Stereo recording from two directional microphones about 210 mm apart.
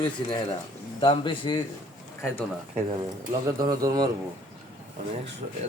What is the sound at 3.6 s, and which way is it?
Speech, 20° right (ahead or behind).